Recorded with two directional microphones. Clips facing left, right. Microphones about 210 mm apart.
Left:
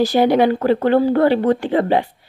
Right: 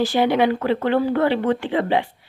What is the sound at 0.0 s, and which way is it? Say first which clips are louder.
Speech: left 4 dB; 40° left (ahead or behind).